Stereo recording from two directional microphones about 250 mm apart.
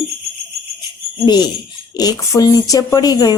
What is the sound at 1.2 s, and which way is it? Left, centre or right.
Speech, centre.